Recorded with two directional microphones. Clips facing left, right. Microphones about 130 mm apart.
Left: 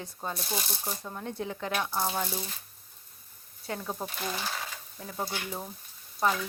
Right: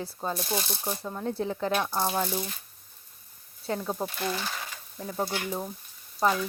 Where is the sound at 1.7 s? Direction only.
10° right (ahead or behind).